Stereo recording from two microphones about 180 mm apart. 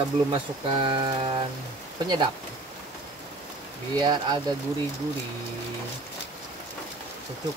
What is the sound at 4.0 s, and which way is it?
Speech, 25° right (ahead or behind).